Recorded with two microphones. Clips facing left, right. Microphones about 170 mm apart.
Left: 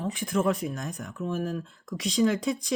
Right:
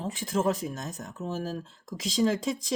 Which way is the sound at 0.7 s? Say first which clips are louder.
Left 2 dB; 20° right (ahead or behind).